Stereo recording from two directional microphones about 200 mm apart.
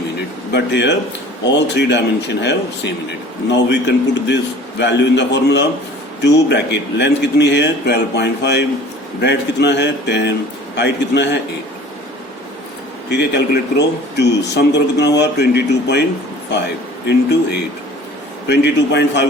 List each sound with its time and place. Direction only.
0.5 s a man's voice: 60° left (ahead or behind)
13.1 s a man's voice: 60° left (ahead or behind)
17.1 s a man's voice: 55° left (ahead or behind)
18.4 s a man's voice: 60° left (ahead or behind)